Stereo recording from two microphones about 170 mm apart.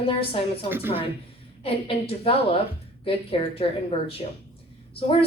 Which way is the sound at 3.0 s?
35° left (ahead or behind).